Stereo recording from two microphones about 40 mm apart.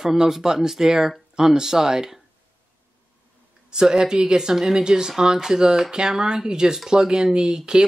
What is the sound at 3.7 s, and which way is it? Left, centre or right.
Speech, centre.